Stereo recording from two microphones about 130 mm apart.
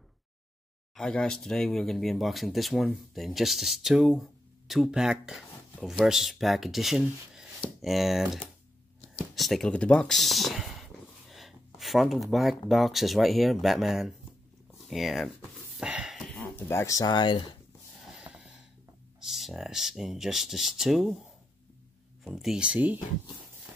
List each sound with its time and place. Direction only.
0.9 s speech: 5° left (ahead or behind)
15.8 s a sound: 5° right (ahead or behind)
16.3 s speech: 15° left (ahead or behind); by 17.6 s 40° left (ahead or behind)
18.1 s wheeze: 5° right (ahead or behind)
19.1 s speech: centre (ahead or behind)
22.2 s speech: centre (ahead or behind)